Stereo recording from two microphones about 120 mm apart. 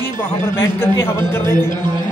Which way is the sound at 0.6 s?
20° left (ahead or behind).